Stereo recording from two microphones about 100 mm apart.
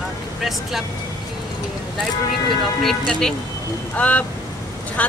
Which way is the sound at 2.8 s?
5° left (ahead or behind).